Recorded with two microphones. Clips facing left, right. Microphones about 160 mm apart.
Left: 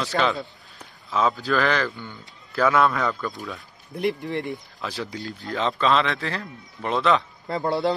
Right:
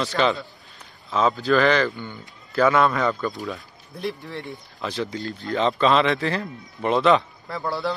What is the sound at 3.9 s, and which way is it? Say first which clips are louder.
Speech: left 5 dB; 15° left (ahead or behind).